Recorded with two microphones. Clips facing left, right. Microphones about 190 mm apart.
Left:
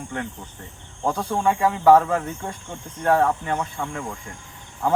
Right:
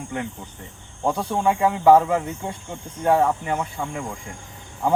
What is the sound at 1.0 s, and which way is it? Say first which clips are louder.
Speech: right 1 dB; 10° right (ahead or behind).